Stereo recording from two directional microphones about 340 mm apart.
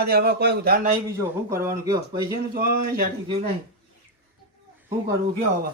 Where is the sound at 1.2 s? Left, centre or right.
Centre.